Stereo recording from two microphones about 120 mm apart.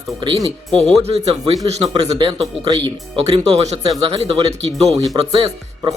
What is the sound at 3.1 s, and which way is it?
Speech, 55° right (ahead or behind).